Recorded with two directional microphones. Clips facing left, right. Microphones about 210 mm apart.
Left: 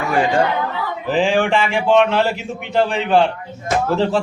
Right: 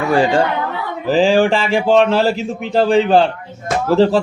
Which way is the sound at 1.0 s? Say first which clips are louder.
Right 5 dB; 35° right (ahead or behind).